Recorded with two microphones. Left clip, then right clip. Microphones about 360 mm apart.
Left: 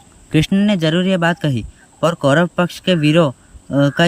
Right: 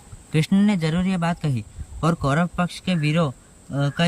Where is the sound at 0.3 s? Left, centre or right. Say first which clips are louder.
Left 6 dB; centre.